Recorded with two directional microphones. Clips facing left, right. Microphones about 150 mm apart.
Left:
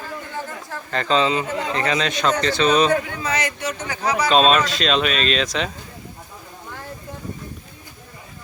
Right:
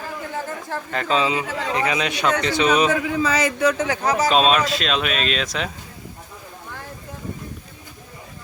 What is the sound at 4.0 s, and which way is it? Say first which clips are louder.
Speech: left 1 dB; 45° right (ahead or behind).